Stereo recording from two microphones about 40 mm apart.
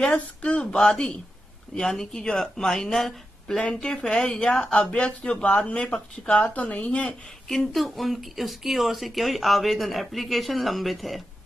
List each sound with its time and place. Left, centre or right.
0.1 s speech: left
1.9 s speech: centre
3.5 s speech: centre
7.4 s speech: centre